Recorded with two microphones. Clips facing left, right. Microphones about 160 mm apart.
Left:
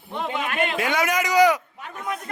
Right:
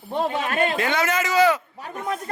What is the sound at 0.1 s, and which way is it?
Speech, 35° right (ahead or behind).